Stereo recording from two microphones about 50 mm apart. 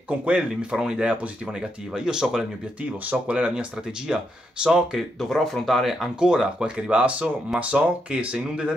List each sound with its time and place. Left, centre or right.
0.1 s speech: right
3.0 s speech: right
4.9 s speech: centre
6.1 s speech: centre